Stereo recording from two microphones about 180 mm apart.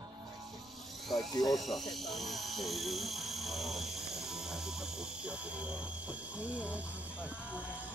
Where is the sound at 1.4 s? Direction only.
Centre (ahead or behind).